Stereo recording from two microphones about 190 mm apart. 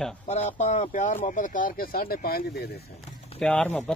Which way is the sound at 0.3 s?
35° left (ahead or behind).